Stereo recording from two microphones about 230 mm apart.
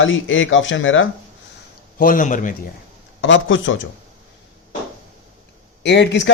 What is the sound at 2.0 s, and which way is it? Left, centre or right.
Speech, left.